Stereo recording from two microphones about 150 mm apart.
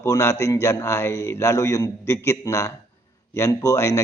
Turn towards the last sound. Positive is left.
turn(degrees=20)  # may be behind; listen again after turning